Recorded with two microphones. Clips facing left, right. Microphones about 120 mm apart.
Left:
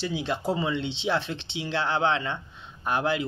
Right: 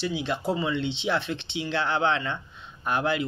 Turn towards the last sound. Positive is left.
turn(degrees=25)  # may be behind; listen again after turning